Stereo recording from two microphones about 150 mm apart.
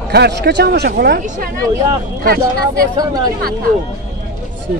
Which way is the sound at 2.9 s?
25° right (ahead or behind).